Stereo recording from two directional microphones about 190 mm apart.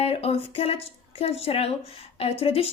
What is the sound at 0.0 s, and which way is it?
A woman's voice, 30° left (ahead or behind).